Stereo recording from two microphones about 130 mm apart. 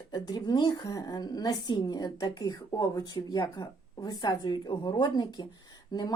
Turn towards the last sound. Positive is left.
turn(degrees=30)  # may be behind; listen again after turning